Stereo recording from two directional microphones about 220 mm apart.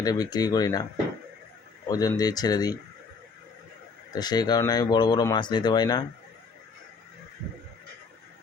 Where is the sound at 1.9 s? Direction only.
15° left (ahead or behind).